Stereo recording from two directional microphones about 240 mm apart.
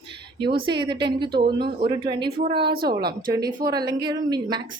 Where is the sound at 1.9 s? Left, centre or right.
Centre.